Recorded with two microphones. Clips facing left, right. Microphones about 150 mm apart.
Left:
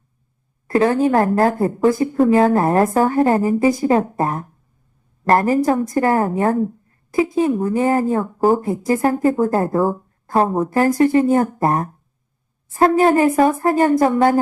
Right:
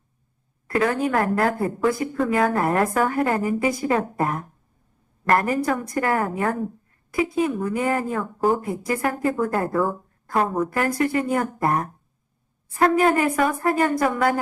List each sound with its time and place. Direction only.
0.7 s a woman's voice: 30° left (ahead or behind)